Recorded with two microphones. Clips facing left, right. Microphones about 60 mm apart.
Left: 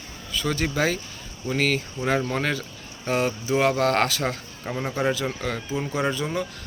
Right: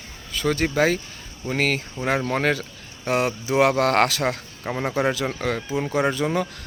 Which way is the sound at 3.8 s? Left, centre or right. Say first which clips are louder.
Right 2 dB; right.